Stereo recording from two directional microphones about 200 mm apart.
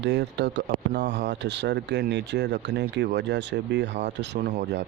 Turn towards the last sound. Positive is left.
turn(degrees=-55)  # may be behind; listen again after turning